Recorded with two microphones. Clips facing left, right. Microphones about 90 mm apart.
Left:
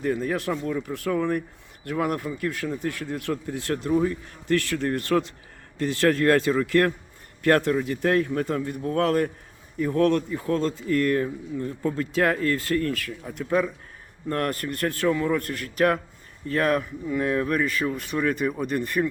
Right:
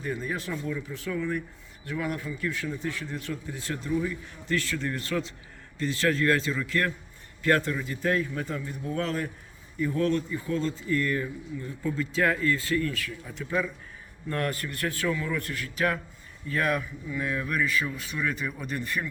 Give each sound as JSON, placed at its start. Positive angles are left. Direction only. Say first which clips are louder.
{"t": 0.0, "sound": "speech", "louder": "left 7 dB", "side_deg": 65}
{"t": 0.5, "sound": "speech", "louder": "left 5 dB", "side_deg": 50}